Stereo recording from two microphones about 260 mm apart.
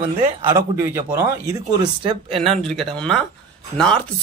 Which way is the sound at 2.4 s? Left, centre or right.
Centre.